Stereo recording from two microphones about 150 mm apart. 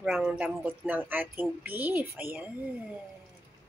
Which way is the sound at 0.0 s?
5° right (ahead or behind).